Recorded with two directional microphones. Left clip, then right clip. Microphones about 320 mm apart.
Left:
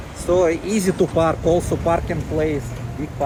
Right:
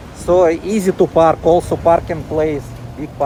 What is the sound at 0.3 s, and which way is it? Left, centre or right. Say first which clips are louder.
Speech: right 5 dB; centre.